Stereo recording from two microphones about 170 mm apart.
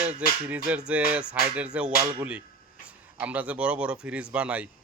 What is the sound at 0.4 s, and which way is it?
Speech, 10° right (ahead or behind).